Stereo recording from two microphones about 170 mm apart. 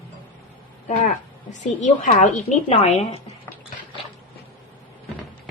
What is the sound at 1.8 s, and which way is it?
A woman's voice, 45° left (ahead or behind).